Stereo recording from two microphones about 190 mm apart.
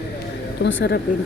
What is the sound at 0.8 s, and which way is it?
Speech, 55° left (ahead or behind).